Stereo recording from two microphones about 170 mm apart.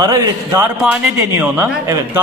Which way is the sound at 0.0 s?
20° right (ahead or behind).